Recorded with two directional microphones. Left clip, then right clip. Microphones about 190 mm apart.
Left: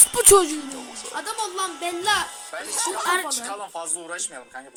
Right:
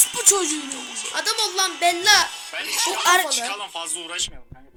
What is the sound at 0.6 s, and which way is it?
Music, 50° left (ahead or behind).